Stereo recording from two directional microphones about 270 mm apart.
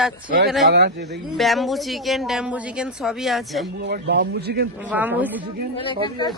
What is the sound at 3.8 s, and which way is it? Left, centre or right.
Speech, right.